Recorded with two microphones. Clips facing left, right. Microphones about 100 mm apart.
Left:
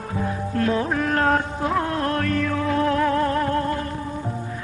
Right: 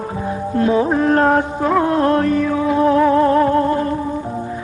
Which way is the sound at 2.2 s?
10° right (ahead or behind).